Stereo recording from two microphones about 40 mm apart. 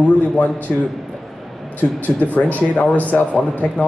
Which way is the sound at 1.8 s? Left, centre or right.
Left.